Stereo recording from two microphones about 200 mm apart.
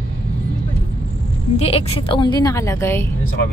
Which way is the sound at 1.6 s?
30° left (ahead or behind).